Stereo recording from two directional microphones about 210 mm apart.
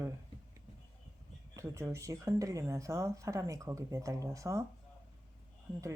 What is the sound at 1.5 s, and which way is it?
Speech, 15° right (ahead or behind).